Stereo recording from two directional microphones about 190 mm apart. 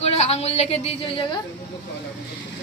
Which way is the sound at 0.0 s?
35° left (ahead or behind).